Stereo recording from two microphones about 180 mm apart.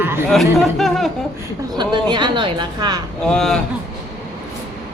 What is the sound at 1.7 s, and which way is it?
A woman's voice, 25° right (ahead or behind).